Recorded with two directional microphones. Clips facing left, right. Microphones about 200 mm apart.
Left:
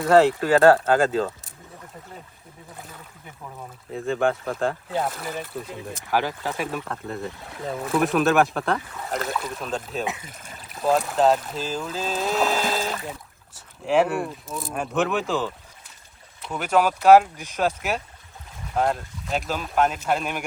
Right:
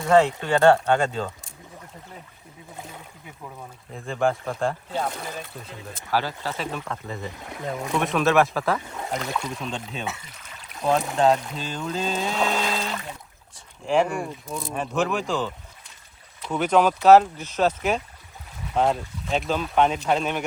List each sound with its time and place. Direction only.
0.1 s speech: 5° left (ahead or behind)
3.9 s speech: centre (ahead or behind)
5.9 s speech: 15° left (ahead or behind)
6.8 s speech: centre (ahead or behind)
10.2 s trickle: 45° left (ahead or behind)
10.7 s speech: centre (ahead or behind)